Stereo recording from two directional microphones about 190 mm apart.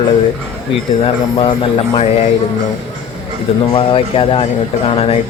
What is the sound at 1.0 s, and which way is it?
Speech, 30° left (ahead or behind).